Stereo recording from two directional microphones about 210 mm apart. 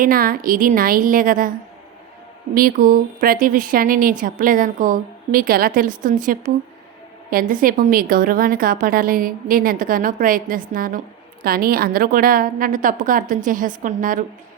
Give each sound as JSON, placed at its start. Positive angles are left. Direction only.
{"t": 0.0, "sound": "a woman's voice", "side_deg": -45}
{"t": 2.6, "sound": "a woman's voice", "side_deg": -40}